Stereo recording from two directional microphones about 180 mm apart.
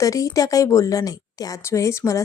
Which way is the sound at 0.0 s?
20° left (ahead or behind).